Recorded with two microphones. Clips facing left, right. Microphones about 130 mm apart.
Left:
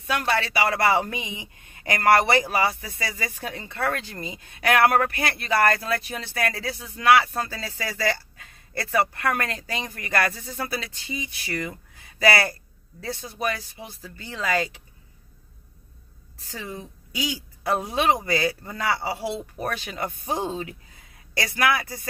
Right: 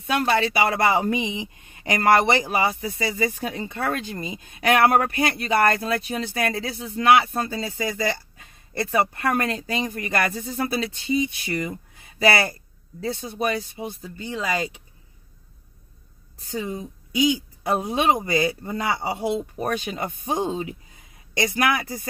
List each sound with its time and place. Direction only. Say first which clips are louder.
0.0 s speech: right 4 dB; 25° right (ahead or behind)
16.5 s speech: right 6 dB; 20° right (ahead or behind)